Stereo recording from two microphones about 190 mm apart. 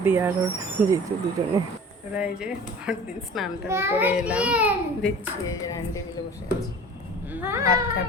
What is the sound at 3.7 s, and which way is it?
Speech, 15° right (ahead or behind).